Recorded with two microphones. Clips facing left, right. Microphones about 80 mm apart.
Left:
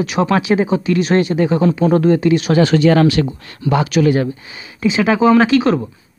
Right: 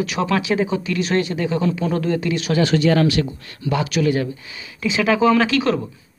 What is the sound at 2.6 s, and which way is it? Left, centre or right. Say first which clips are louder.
Speech: left 3 dB; left.